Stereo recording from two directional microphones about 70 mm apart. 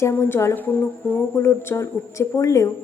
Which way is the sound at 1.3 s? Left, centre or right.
Left.